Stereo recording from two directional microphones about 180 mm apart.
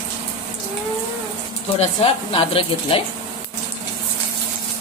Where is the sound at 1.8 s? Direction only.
30° left (ahead or behind).